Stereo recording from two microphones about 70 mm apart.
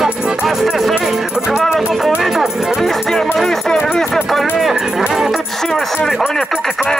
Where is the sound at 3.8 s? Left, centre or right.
Centre.